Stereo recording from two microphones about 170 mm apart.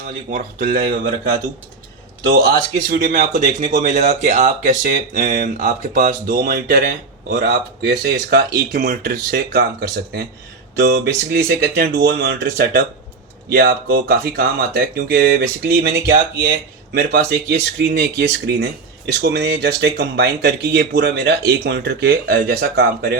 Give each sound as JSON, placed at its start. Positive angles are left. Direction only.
{"t": 0.0, "sound": "speech", "side_deg": -55}
{"t": 2.9, "sound": "speech", "side_deg": -50}